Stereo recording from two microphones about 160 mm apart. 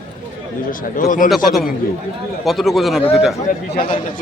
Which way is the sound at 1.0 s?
55° left (ahead or behind).